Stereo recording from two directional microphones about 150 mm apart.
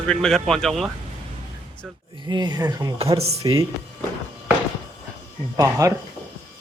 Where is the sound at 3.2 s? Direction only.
45° right (ahead or behind).